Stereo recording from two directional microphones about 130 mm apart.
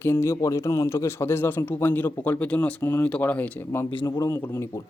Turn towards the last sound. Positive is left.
turn(degrees=20)  # may be behind; listen again after turning